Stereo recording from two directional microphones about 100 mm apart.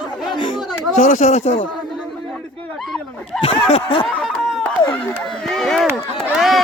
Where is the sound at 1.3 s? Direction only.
90° left.